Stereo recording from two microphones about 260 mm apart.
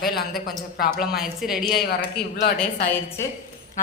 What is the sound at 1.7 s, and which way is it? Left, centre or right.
Speech, left.